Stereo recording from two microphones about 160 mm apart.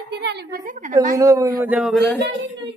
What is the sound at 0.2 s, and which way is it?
Speech, 90° right.